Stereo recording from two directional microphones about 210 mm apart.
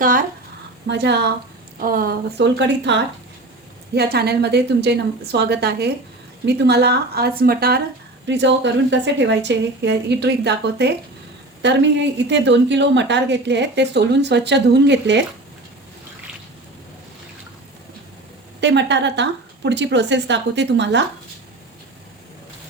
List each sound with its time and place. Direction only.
0.0 s a woman's voice: 40° right (ahead or behind)
0.9 s a woman's voice: 55° right (ahead or behind)
1.8 s a woman's voice: 40° right (ahead or behind)
8.3 s a woman's voice: 55° right (ahead or behind)
18.6 s a woman's voice: 55° right (ahead or behind)